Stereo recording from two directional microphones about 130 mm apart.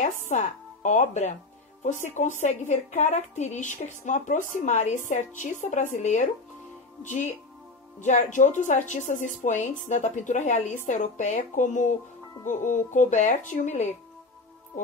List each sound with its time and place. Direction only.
0.3 s a woman's voice: 65° left (ahead or behind)